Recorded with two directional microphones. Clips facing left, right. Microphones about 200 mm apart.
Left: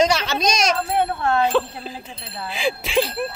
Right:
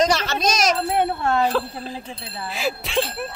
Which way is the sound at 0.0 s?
Centre (ahead or behind).